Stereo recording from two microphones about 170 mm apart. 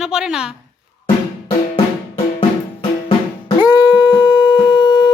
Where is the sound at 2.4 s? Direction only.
30° left (ahead or behind).